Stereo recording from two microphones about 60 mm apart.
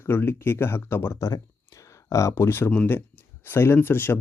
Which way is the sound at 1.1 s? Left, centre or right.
Left.